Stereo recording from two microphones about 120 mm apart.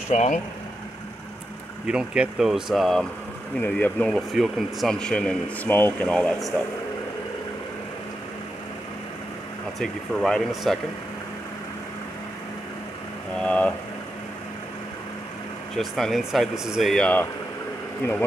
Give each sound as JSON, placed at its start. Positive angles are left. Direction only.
{"t": 0.1, "sound": "speech", "side_deg": 75}
{"t": 1.9, "sound": "speech", "side_deg": -5}
{"t": 3.6, "sound": "speech", "side_deg": 10}
{"t": 9.8, "sound": "speech", "side_deg": 0}
{"t": 13.4, "sound": "speech", "side_deg": 10}
{"t": 15.7, "sound": "speech", "side_deg": 0}